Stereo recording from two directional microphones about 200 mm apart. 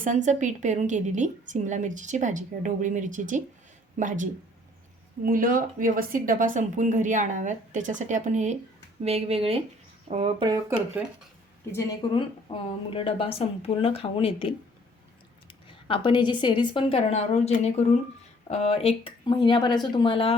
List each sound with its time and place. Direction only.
0.0 s a woman's voice: 40° right (ahead or behind)
10.4 s speech: 15° right (ahead or behind)
11.7 s speech: 20° left (ahead or behind)
15.9 s speech: 25° left (ahead or behind)